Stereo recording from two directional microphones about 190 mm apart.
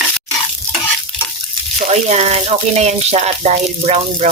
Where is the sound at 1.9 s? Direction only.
35° right (ahead or behind).